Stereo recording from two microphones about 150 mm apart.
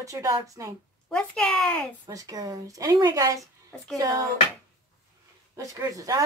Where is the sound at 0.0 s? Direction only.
20° right (ahead or behind).